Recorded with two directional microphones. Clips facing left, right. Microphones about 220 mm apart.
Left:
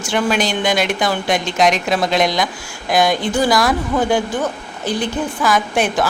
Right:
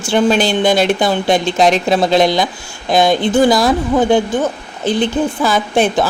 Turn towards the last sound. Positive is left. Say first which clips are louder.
# right 4 dB
turn(degrees=-25)  # may be behind; listen again after turning